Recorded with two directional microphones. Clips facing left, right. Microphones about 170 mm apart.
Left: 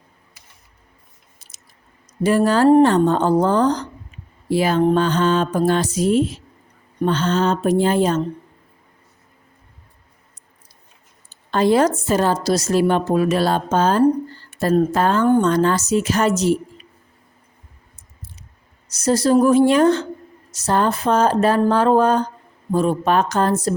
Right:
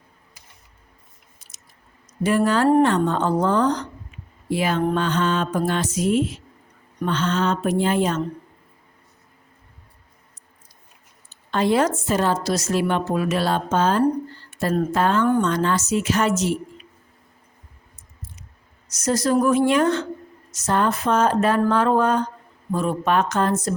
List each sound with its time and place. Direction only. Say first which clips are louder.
1.4 s biting: left 1 dB; 30° left (ahead or behind)
2.2 s a woman's voice: left 4 dB; 35° left (ahead or behind)
11.5 s a woman's voice: left 4 dB; 40° left (ahead or behind)
18.9 s a woman's voice: left 4 dB; 30° left (ahead or behind)